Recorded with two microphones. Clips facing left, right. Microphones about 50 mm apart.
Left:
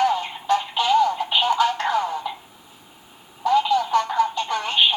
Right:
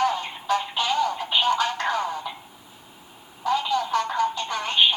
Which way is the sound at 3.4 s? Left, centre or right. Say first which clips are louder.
Left 5 dB; centre.